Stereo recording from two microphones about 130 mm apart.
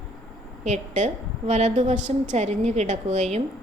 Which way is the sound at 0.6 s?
65° right (ahead or behind).